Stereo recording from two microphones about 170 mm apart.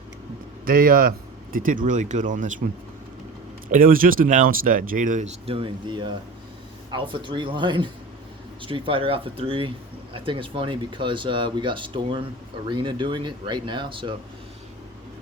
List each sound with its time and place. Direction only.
0.6 s speech: 55° right (ahead or behind)
3.7 s speech: 55° right (ahead or behind)
5.5 s speech: 30° right (ahead or behind)